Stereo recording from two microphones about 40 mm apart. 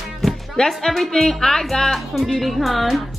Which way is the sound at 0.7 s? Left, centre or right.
Centre.